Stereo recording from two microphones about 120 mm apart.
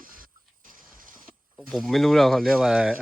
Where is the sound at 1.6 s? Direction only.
Centre (ahead or behind).